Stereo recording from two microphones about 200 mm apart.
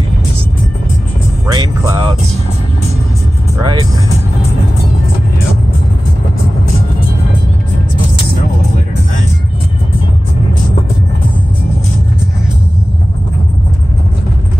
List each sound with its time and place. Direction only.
1.5 s music: 20° right (ahead or behind)
3.6 s music: 20° right (ahead or behind)